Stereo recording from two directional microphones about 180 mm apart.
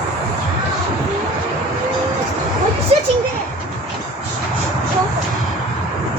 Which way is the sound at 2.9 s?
35° right (ahead or behind).